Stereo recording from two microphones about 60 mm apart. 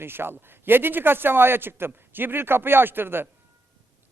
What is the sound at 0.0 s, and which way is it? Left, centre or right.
A man's voice, right.